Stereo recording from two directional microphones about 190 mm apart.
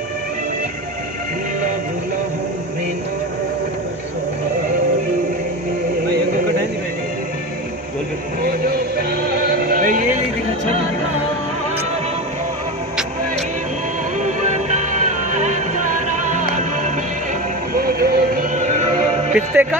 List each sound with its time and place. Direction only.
8.4 s music: 50° right (ahead or behind)
14.2 s music: 40° right (ahead or behind)
17.7 s music: 50° right (ahead or behind)
18.6 s music: 40° right (ahead or behind)
19.3 s music: 10° right (ahead or behind)